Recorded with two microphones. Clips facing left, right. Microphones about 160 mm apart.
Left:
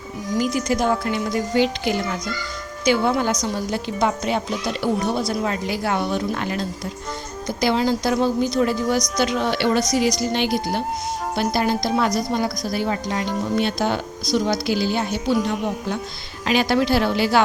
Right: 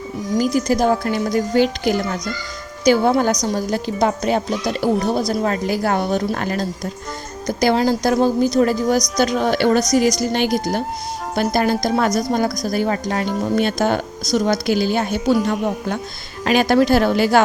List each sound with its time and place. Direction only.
0.3 s a woman's voice: 40° right (ahead or behind)